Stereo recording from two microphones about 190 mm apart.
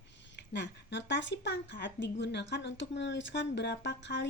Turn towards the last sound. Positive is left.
turn(degrees=65)  # may be behind; listen again after turning